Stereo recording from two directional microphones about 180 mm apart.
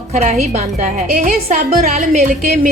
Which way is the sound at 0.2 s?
40° right (ahead or behind).